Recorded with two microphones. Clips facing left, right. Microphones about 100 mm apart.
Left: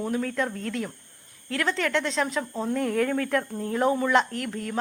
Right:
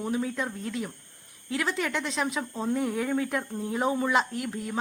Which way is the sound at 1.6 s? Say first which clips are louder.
Left 4 dB; 15° right (ahead or behind).